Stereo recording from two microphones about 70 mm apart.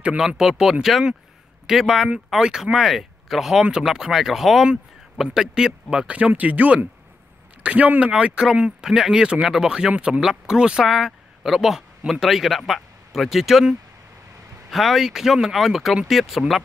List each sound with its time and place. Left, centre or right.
0.4 s speech: centre